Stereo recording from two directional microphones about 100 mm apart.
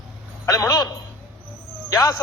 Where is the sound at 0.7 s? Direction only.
40° left (ahead or behind).